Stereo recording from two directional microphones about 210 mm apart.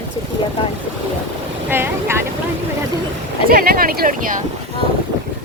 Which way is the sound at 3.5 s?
45° right (ahead or behind).